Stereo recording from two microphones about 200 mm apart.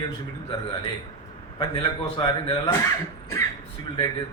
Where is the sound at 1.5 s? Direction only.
25° left (ahead or behind).